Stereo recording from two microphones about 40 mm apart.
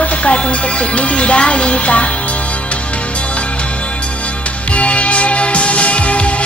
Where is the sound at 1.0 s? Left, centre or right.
Left.